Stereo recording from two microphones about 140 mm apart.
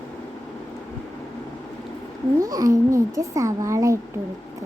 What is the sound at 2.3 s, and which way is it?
A child's voice, 25° right (ahead or behind).